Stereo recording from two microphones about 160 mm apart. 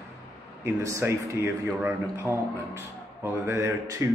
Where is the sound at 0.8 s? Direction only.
15° right (ahead or behind).